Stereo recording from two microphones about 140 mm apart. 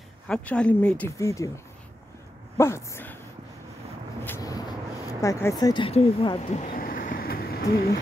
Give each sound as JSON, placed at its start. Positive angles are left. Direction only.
{"t": 0.3, "sound": "speech", "side_deg": 10}
{"t": 1.1, "sound": "speech", "side_deg": 20}
{"t": 2.5, "sound": "speech", "side_deg": 20}
{"t": 4.4, "sound": "vehicle", "side_deg": 25}
{"t": 5.2, "sound": "speech", "side_deg": 20}
{"t": 5.9, "sound": "speech", "side_deg": 45}
{"t": 6.7, "sound": "a sound", "side_deg": 85}